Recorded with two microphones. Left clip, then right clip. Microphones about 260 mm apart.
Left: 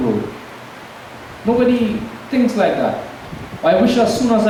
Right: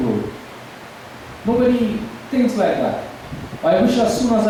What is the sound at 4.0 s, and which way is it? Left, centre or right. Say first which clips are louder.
Speech: left 2 dB; centre.